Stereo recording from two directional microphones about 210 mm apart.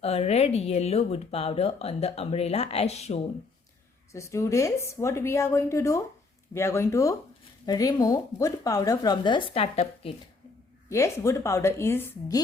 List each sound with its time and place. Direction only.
0.0 s speech: 30° left (ahead or behind)
4.1 s a woman's voice: 15° left (ahead or behind)
10.8 s a woman's voice: 15° left (ahead or behind)